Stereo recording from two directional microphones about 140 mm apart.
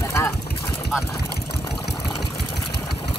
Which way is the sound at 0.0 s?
20° left (ahead or behind).